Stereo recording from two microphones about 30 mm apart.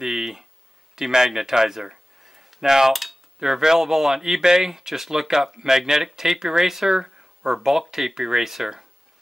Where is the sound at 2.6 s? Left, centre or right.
Centre.